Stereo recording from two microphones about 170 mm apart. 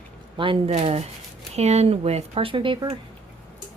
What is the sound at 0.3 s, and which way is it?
Speech, 30° right (ahead or behind).